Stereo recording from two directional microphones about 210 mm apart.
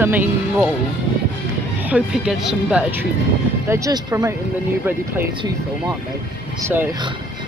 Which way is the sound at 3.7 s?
15° right (ahead or behind).